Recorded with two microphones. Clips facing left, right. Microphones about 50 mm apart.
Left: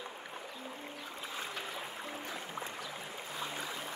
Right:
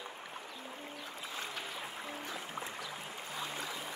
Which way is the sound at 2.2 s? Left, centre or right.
Centre.